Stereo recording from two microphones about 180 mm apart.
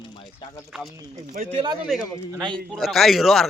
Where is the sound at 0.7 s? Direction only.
Centre (ahead or behind).